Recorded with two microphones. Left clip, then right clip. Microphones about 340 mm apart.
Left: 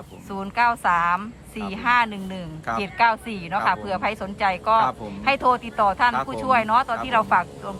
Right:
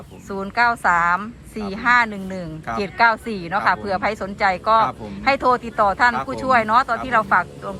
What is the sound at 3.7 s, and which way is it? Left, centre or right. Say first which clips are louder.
Speech: right 4 dB; centre.